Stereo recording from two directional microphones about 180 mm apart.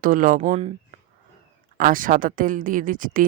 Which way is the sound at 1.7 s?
50° right (ahead or behind).